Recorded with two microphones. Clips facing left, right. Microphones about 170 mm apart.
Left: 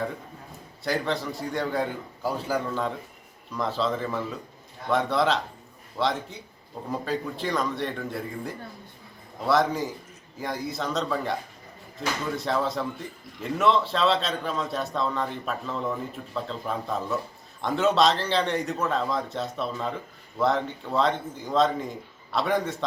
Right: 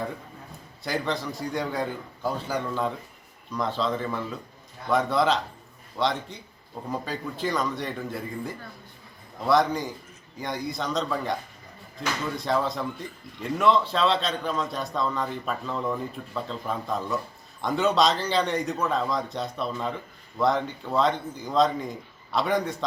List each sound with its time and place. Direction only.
0.9 s speech: centre (ahead or behind)